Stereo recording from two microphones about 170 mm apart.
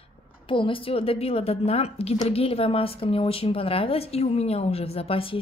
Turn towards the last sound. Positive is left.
turn(degrees=35)  # may be behind; listen again after turning